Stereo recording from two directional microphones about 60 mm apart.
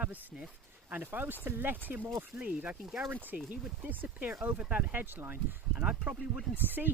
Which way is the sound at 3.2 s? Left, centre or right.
Right.